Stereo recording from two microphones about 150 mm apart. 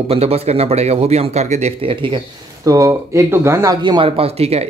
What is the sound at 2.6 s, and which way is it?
Speech, 20° right (ahead or behind).